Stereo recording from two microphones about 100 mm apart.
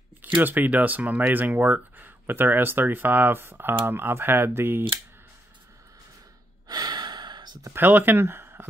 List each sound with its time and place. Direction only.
0.2 s speech: 20° right (ahead or behind)
6.7 s sigh: 45° right (ahead or behind)
7.7 s speech: 20° right (ahead or behind)